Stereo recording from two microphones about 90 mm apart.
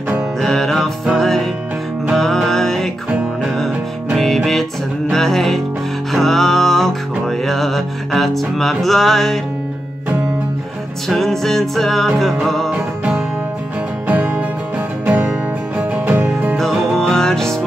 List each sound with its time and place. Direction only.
0.4 s music: 5° left (ahead or behind)
5.1 s music: 5° left (ahead or behind)
11.1 s music: 5° left (ahead or behind)
12.7 s music: 15° right (ahead or behind)
16.5 s music: 5° left (ahead or behind)